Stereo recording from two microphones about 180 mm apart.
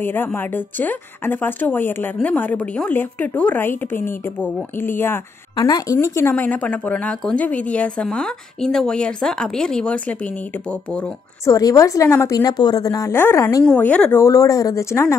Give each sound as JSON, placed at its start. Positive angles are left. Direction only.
{"t": 0.0, "sound": "a woman's voice", "side_deg": 10}
{"t": 11.5, "sound": "a woman's voice", "side_deg": 15}
{"t": 13.7, "sound": "a woman's voice", "side_deg": 5}